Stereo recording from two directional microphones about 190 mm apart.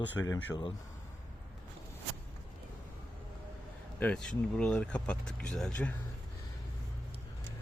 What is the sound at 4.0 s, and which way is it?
Speech, 5° left (ahead or behind).